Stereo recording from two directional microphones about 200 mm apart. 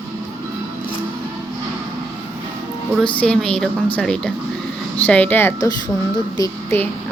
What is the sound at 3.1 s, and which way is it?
Speech, 5° left (ahead or behind).